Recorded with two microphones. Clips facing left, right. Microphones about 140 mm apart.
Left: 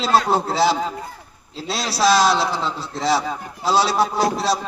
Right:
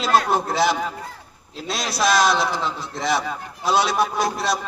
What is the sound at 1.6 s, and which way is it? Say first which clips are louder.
Speech: left 1 dB; 20° right (ahead or behind).